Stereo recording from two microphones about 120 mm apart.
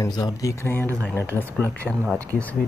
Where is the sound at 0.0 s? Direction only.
30° left (ahead or behind).